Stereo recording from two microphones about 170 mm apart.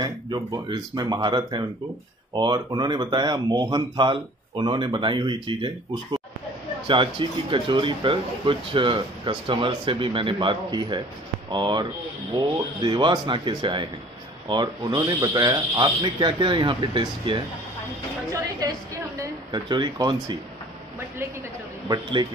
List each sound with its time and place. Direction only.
0.0 s speech: 25° right (ahead or behind)
6.9 s speech: 30° right (ahead or behind)
19.1 s speech: 20° right (ahead or behind)
21.8 s speech: 20° right (ahead or behind)